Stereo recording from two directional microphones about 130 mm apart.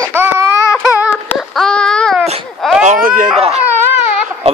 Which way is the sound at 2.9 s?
85° right.